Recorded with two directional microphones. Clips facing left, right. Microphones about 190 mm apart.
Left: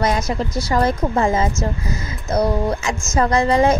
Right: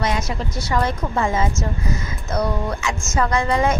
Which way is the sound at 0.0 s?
40° left (ahead or behind).